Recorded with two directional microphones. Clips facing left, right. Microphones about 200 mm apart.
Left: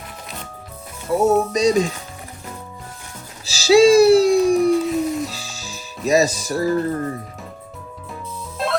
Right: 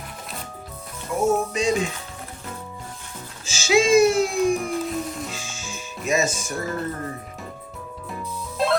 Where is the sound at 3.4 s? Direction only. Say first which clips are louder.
Left 8 dB; 35° left (ahead or behind).